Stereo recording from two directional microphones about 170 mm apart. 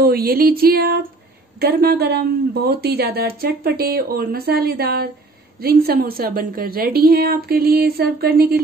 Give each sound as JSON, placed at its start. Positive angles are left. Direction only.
{"t": 0.0, "sound": "a woman's voice", "side_deg": -60}